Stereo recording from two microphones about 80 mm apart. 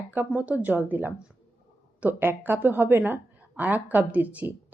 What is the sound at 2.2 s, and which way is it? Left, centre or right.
A woman's voice, right.